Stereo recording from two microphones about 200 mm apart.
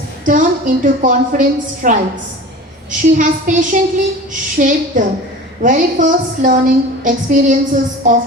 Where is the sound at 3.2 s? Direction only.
40° right (ahead or behind).